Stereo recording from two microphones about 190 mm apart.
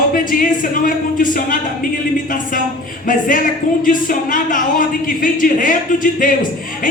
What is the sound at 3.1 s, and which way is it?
Speech, 45° left (ahead or behind).